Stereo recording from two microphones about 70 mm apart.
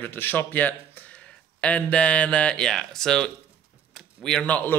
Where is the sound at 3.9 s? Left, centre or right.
Centre.